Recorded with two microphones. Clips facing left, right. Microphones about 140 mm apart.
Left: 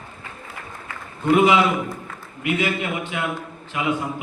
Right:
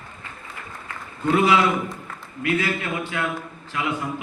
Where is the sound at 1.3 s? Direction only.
20° left (ahead or behind).